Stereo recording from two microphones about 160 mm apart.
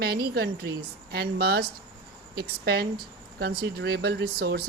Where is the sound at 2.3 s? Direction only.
90° right.